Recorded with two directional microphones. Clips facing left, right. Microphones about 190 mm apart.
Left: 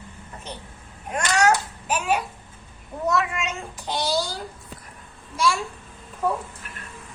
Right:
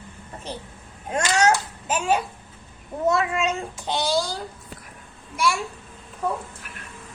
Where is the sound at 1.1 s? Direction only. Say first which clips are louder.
Even; 25° right (ahead or behind).